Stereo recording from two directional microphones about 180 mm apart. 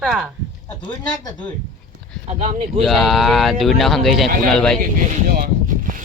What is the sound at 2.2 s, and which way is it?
Speech, 40° right (ahead or behind).